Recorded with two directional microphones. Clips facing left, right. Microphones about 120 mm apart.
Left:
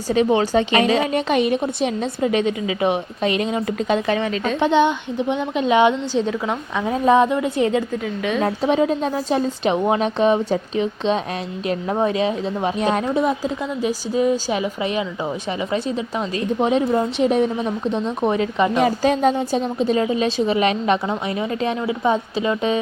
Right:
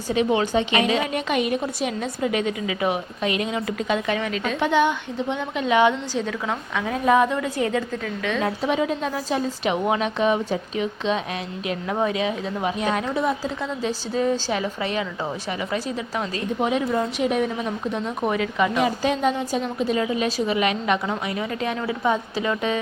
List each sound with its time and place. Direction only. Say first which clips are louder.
0.1 s a woman's voice: left 4 dB; 35° left (ahead or behind); by 8.4 s 20° left (ahead or behind)
8.4 s a woman's voice: left 5 dB; 35° left (ahead or behind)
13.1 s a woman's voice: left 4 dB; 20° left (ahead or behind)